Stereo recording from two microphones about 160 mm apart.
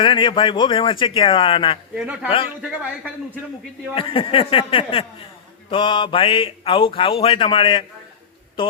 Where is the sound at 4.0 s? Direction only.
35° left (ahead or behind).